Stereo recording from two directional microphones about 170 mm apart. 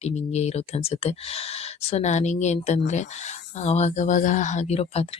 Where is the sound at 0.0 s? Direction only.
40° left (ahead or behind).